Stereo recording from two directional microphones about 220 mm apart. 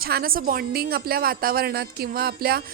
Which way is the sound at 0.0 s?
45° right (ahead or behind).